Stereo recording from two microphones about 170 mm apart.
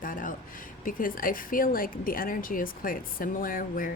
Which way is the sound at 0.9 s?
55° left (ahead or behind).